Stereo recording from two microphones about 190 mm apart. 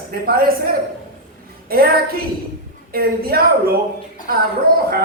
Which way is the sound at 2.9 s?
55° right (ahead or behind).